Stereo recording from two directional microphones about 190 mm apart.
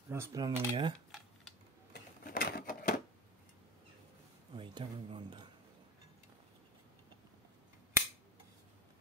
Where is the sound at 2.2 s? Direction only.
50° left (ahead or behind).